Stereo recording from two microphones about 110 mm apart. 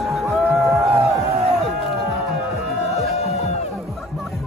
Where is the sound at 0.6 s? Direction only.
25° right (ahead or behind).